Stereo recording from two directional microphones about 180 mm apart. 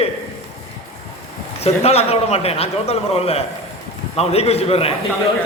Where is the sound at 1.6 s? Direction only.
35° left (ahead or behind).